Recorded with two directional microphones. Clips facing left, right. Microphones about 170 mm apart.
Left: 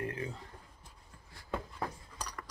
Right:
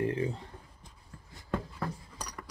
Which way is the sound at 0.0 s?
30° right (ahead or behind).